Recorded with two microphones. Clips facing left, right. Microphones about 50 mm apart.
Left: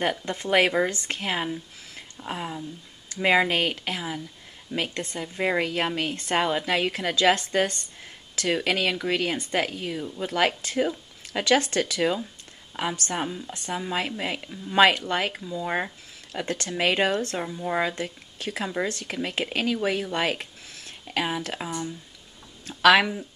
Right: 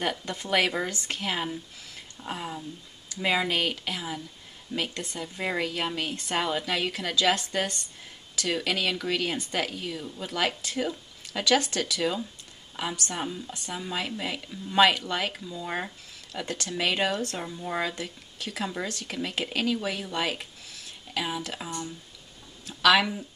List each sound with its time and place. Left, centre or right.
0.2 s speech: left
3.2 s speech: left
13.5 s speech: left
13.9 s speech: left
15.4 s speech: centre
16.3 s speech: left
17.4 s speech: centre
17.9 s speech: left
18.6 s speech: left
18.9 s speech: left
21.5 s speech: left
22.7 s a sound: left